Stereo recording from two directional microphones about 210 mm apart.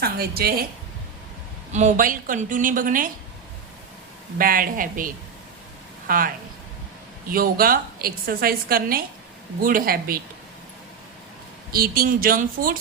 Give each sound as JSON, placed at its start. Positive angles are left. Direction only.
{"t": 0.0, "sound": "a woman's voice", "side_deg": -45}
{"t": 1.7, "sound": "a woman's voice", "side_deg": -35}
{"t": 4.4, "sound": "a woman's voice", "side_deg": -40}
{"t": 11.7, "sound": "a woman's voice", "side_deg": -45}